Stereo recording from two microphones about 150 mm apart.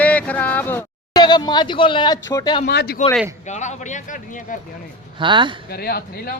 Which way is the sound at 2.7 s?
90° left.